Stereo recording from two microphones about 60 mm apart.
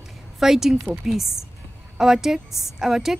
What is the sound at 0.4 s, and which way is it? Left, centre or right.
A woman's voice, centre.